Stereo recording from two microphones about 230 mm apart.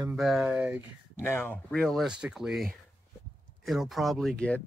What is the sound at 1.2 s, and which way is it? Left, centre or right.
Speech, centre.